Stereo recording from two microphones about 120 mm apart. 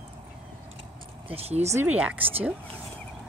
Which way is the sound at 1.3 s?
60° right (ahead or behind).